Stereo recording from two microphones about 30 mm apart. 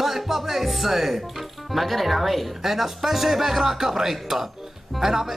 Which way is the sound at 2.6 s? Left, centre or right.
Centre.